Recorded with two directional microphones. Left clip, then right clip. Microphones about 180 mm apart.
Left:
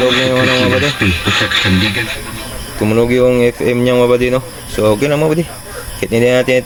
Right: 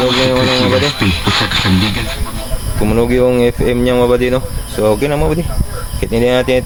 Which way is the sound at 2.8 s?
5° left (ahead or behind).